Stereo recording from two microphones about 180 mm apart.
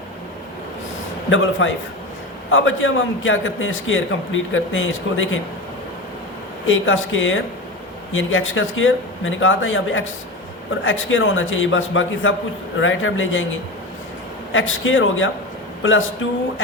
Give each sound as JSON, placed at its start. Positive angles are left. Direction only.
{"t": 1.3, "sound": "a man's voice", "side_deg": 90}
{"t": 6.7, "sound": "a man's voice", "side_deg": 90}